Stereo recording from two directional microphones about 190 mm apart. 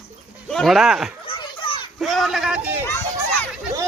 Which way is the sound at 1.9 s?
Centre (ahead or behind).